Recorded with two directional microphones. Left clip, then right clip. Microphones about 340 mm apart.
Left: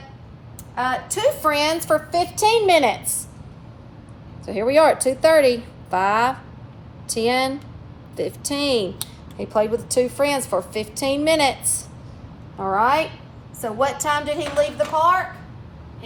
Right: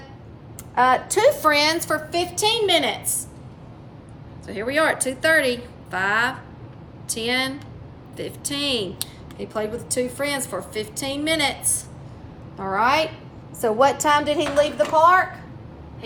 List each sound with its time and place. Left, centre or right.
0.9 s a woman's voice: centre
4.4 s a woman's voice: centre
12.5 s a woman's voice: centre
13.6 s a woman's voice: centre